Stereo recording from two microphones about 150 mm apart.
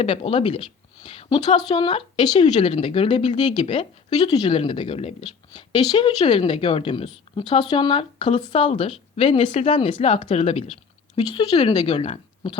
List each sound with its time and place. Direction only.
0.0 s a woman's voice: 35° left (ahead or behind)
5.5 s speech: 30° left (ahead or behind)
11.2 s speech: 30° left (ahead or behind)